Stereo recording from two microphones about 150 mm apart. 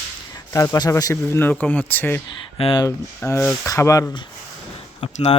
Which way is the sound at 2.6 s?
40° left (ahead or behind).